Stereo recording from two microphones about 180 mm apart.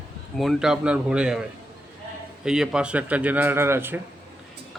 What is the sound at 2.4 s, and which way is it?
Speech, 5° right (ahead or behind).